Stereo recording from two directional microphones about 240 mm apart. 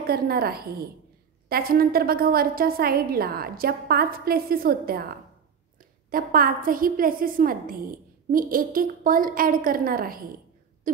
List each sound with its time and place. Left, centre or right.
0.0 s a woman's voice: right